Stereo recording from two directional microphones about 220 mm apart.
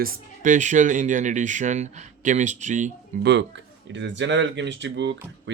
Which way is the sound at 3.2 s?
55° right (ahead or behind).